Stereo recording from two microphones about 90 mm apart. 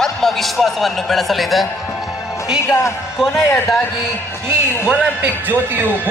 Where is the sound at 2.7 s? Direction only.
30° left (ahead or behind).